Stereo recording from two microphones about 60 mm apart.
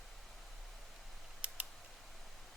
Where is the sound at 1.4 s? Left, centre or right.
Right.